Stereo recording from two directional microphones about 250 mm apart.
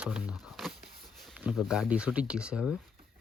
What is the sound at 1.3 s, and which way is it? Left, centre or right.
Speech, centre.